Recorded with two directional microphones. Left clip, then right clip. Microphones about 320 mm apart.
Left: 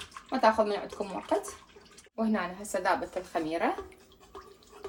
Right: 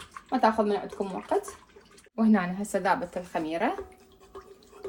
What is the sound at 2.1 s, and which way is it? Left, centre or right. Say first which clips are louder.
A woman's voice: right 5 dB; right.